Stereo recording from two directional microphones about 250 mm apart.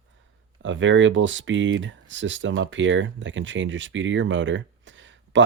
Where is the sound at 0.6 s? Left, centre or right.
Right.